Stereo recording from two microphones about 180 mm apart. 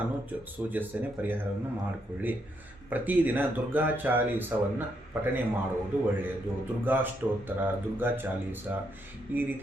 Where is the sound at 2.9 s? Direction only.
10° right (ahead or behind).